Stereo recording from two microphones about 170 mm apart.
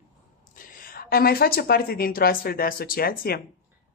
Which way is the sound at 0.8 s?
60° left (ahead or behind).